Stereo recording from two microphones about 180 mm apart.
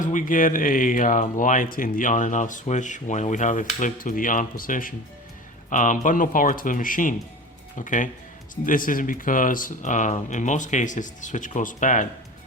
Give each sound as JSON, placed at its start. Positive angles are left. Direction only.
{"t": 0.0, "sound": "speech", "side_deg": 45}